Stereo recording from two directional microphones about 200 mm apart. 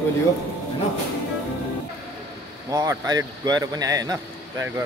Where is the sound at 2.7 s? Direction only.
20° right (ahead or behind).